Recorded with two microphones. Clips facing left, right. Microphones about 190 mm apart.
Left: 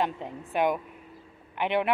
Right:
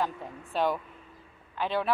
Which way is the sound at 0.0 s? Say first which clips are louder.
Left 3 dB; 20° left (ahead or behind).